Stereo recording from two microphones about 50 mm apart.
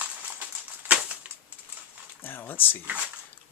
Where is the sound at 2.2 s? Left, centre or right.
Left.